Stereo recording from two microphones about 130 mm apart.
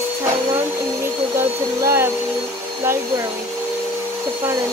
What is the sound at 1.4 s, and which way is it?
Vacuum cleaner, 20° right (ahead or behind).